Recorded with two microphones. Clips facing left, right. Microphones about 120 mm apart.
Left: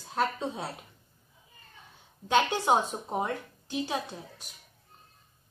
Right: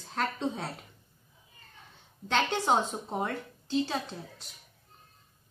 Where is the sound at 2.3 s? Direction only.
10° left (ahead or behind).